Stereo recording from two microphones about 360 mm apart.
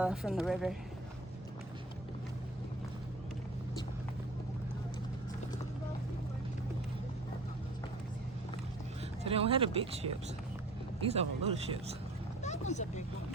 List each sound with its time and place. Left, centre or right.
0.0 s speech: centre
9.2 s speech: centre
12.4 s a sound: centre